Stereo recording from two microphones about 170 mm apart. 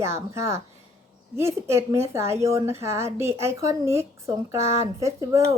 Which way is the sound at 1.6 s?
15° right (ahead or behind).